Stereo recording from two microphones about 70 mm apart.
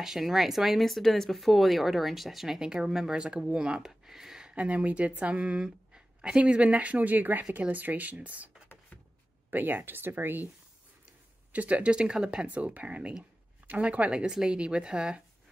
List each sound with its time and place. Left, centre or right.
0.0 s speech: centre; by 10.5 s right
11.5 s speech: right